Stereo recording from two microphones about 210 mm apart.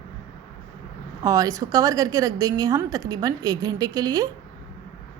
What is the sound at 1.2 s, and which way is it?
A woman's voice, 15° right (ahead or behind).